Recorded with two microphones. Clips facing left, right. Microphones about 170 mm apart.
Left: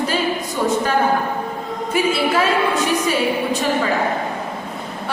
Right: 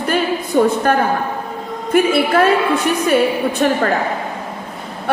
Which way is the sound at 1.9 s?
55° right (ahead or behind).